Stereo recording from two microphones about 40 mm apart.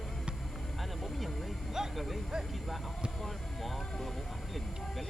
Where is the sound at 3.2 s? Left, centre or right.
Centre.